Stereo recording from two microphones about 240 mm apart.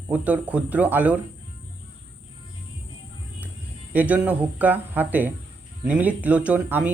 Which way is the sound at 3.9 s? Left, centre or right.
Centre.